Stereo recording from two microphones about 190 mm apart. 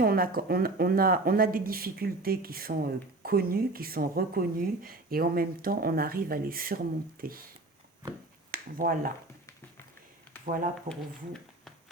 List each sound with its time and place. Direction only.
0.0 s speech: 50° right (ahead or behind)
8.4 s speech: 50° right (ahead or behind)
10.4 s speech: 45° right (ahead or behind)